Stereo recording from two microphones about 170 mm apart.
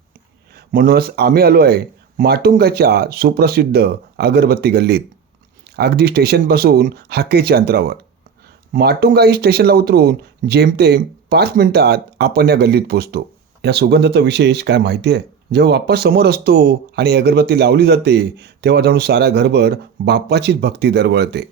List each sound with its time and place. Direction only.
0.5 s speech: 60° right (ahead or behind); by 21.4 s 75° right (ahead or behind)